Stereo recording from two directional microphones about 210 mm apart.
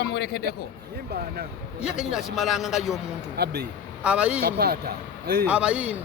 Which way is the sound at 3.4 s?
50° right (ahead or behind).